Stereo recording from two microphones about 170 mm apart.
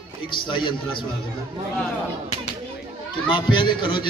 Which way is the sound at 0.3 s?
30° left (ahead or behind).